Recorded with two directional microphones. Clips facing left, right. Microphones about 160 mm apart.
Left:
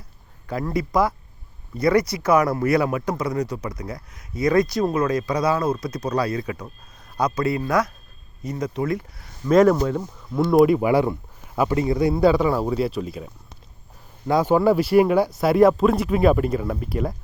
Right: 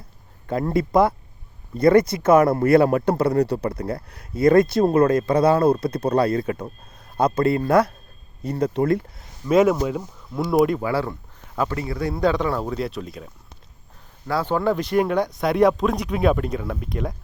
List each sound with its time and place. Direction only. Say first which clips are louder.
0.4 s speech: right 3 dB; 25° right (ahead or behind)
3.2 s speech: right 5 dB; 60° right (ahead or behind)
4.6 s speech: right 3 dB; 25° right (ahead or behind)
4.9 s speech: right 5 dB; 55° right (ahead or behind)
5.5 s speech: right 5 dB; 30° right (ahead or behind)
6.2 s speech: right 4 dB; 50° right (ahead or behind)
7.6 s speech: right 4 dB; 30° right (ahead or behind)
9.5 s speech: left 2 dB; 5° right (ahead or behind)
10.8 s a man's voice: left 5 dB; 15° left (ahead or behind)
12.1 s speech: left 1 dB; 5° left (ahead or behind)
14.3 s speech: left 4 dB; 15° left (ahead or behind)